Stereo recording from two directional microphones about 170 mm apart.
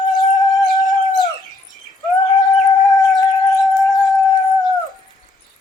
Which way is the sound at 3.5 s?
Centre (ahead or behind).